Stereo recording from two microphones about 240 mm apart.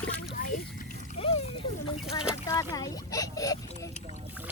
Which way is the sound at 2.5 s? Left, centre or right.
Centre.